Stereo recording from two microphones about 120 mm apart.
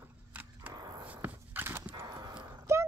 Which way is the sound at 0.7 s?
35° right (ahead or behind).